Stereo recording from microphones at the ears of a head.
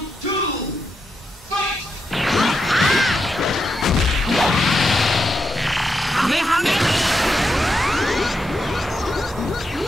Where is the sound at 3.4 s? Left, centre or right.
Left.